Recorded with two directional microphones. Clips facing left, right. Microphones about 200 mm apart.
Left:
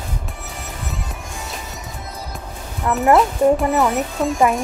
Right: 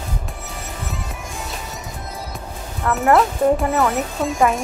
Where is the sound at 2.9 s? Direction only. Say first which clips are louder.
Left 1 dB; 15° left (ahead or behind).